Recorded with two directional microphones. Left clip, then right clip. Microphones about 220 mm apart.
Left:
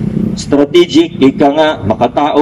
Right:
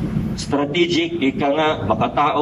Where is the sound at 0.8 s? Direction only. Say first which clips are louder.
Left 9 dB; 45° left (ahead or behind).